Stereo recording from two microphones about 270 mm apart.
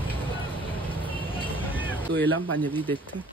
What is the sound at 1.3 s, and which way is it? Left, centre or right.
Vehicle, centre.